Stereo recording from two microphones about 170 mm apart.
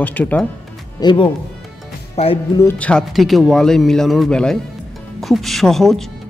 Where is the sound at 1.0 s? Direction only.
30° left (ahead or behind).